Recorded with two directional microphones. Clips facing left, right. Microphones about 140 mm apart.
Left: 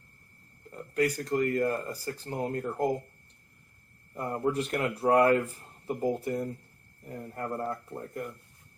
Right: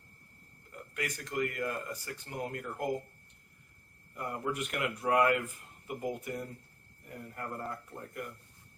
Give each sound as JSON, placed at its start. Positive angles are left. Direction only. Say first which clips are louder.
{"t": 0.7, "sound": "a man's voice", "louder": "left 11 dB", "side_deg": 35}
{"t": 4.1, "sound": "a man's voice", "louder": "left 6 dB", "side_deg": 35}